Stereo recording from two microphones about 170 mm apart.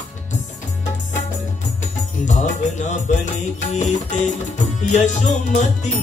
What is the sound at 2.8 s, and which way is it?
Music, 45° left (ahead or behind).